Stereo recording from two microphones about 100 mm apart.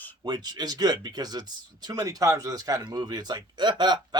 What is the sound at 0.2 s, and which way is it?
Speech, 45° right (ahead or behind).